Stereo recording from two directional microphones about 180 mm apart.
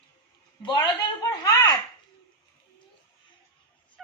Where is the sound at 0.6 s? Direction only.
25° left (ahead or behind).